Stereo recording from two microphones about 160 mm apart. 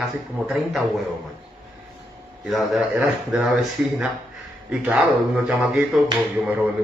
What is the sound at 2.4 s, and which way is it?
Speech, centre (ahead or behind).